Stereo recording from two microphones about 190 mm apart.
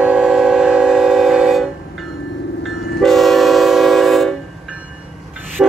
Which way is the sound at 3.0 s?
Centre (ahead or behind).